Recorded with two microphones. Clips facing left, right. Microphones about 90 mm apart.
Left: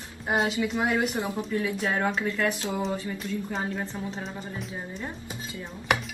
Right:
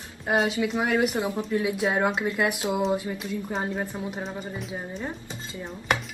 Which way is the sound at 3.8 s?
15° right (ahead or behind).